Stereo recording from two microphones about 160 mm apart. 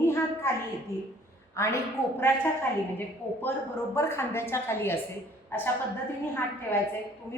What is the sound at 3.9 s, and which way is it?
A woman's voice, 15° left (ahead or behind).